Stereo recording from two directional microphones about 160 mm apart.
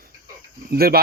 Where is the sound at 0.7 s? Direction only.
70° right (ahead or behind).